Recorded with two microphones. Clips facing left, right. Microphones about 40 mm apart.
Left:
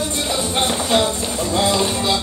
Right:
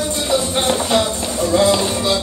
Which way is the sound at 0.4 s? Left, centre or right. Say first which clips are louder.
Even; left.